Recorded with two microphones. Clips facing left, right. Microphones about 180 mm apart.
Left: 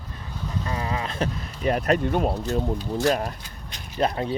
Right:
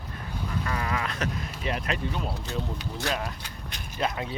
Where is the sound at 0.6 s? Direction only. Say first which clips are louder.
Left 2 dB; 25° left (ahead or behind).